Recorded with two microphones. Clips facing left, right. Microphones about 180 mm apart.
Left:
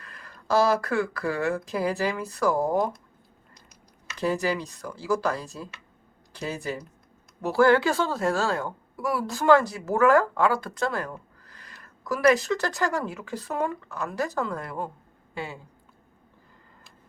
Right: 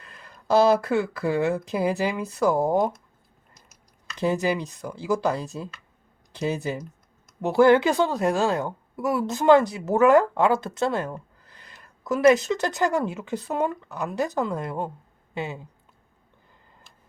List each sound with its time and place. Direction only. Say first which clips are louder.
0.0 s a woman's voice: even; 20° right (ahead or behind)
3.5 s a sound: left 3 dB; centre (ahead or behind)
4.2 s a woman's voice: right 2 dB; 20° right (ahead or behind)